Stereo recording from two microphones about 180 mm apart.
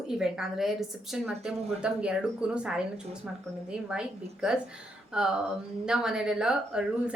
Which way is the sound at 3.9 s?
5° right (ahead or behind).